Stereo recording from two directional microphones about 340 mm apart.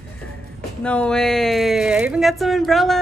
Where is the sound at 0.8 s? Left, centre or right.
Centre.